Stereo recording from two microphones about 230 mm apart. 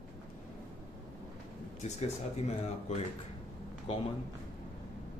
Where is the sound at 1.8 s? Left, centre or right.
Left.